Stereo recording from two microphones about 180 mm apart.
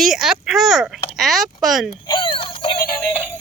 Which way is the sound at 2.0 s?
25° left (ahead or behind).